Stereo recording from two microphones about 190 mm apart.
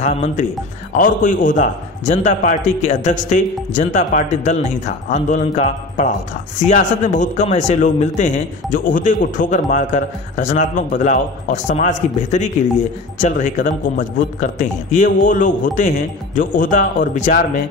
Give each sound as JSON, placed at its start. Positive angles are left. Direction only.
{"t": 0.0, "sound": "speech", "side_deg": 35}